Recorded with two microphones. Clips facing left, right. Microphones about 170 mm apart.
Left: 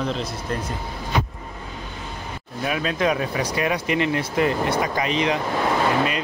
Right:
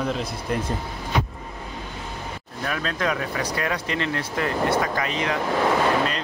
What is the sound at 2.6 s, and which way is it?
Speech, 15° left (ahead or behind).